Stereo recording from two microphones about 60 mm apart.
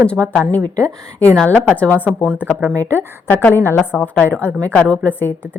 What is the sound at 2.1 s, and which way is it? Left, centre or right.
Speech, centre.